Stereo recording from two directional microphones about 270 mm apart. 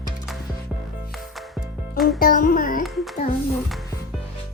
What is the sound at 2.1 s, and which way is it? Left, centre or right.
Music, left.